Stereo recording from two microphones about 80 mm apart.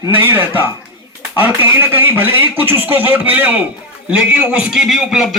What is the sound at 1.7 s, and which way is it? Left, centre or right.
A man's voice, right.